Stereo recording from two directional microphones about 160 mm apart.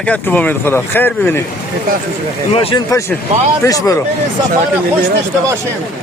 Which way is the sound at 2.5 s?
35° left (ahead or behind).